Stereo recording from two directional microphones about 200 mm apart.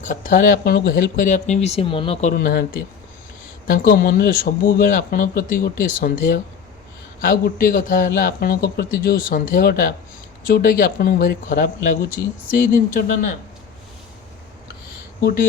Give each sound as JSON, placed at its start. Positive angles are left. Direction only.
{"t": 0.0, "sound": "speech", "side_deg": 40}
{"t": 0.5, "sound": "speech", "side_deg": 55}
{"t": 2.3, "sound": "speech", "side_deg": 45}